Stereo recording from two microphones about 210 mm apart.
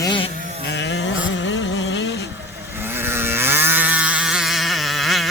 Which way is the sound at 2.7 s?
10° right (ahead or behind).